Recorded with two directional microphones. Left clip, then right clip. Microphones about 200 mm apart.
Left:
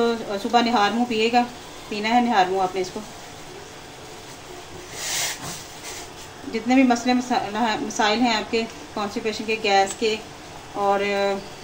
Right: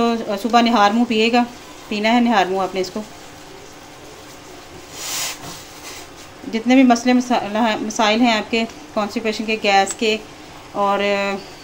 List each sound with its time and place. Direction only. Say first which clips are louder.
0.0 s a woman's voice: right 3 dB; 45° right (ahead or behind)
6.5 s a woman's voice: right 5 dB; 45° right (ahead or behind)